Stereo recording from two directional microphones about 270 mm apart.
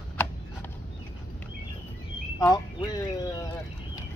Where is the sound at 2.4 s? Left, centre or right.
Centre.